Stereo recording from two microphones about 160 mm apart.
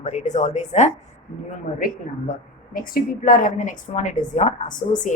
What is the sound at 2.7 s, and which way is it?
A woman's voice, 60° left (ahead or behind).